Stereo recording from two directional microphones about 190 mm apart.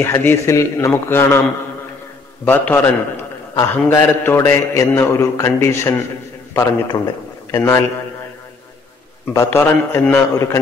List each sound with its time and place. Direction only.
0.0 s a man's voice: 15° left (ahead or behind)
2.4 s a man's voice: 10° left (ahead or behind)
9.3 s a man's voice: 15° left (ahead or behind)